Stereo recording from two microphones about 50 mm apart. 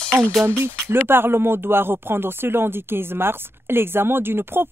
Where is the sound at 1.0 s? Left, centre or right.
Right.